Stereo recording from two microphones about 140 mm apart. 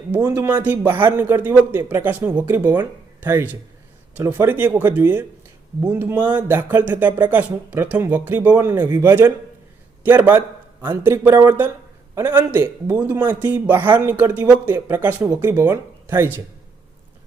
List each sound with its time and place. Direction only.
0.1 s speech: 10° right (ahead or behind)